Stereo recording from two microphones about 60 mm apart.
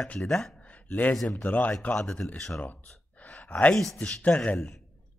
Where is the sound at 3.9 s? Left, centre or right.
Left.